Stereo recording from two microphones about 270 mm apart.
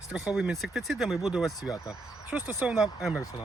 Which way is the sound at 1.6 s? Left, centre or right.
Centre.